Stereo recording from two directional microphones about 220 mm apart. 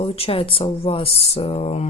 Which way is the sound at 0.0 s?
25° left (ahead or behind).